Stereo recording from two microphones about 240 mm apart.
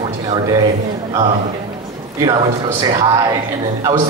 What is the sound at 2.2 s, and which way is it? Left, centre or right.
Speech, centre.